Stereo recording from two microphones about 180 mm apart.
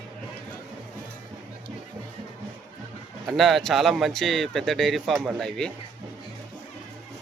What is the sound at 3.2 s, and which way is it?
Speech, centre (ahead or behind).